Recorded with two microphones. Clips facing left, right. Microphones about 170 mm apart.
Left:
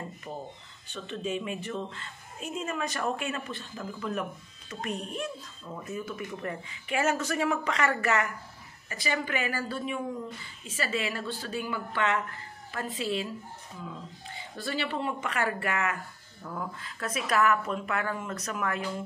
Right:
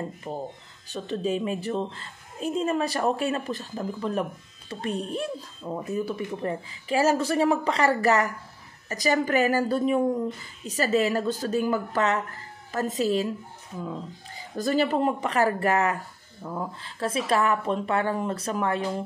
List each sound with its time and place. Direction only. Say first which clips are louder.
0.3 s a woman's voice: right 6 dB; 30° right (ahead or behind)